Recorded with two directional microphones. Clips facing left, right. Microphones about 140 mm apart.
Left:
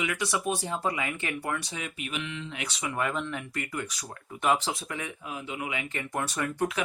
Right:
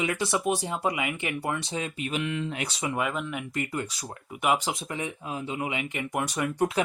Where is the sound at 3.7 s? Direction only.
25° right (ahead or behind).